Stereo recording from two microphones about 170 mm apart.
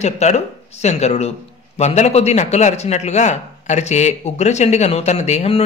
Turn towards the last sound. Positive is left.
turn(degrees=40)  # may be behind; listen again after turning